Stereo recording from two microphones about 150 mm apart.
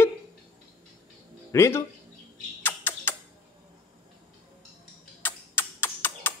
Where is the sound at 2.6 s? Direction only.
15° left (ahead or behind).